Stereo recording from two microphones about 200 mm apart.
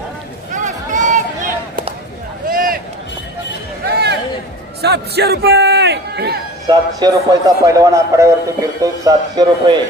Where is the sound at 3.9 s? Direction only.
55° right (ahead or behind).